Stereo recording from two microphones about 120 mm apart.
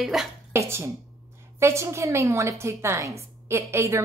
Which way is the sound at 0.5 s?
25° right (ahead or behind).